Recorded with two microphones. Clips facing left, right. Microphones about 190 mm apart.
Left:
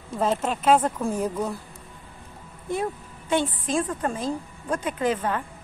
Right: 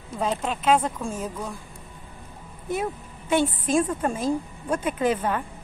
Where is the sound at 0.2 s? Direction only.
5° left (ahead or behind).